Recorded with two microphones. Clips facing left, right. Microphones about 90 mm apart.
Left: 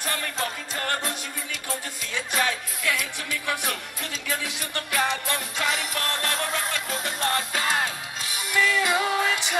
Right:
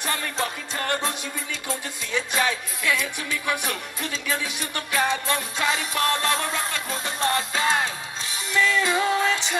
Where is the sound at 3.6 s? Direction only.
20° right (ahead or behind).